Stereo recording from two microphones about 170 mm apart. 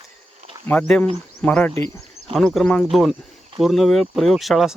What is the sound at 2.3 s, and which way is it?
Speech, 5° left (ahead or behind).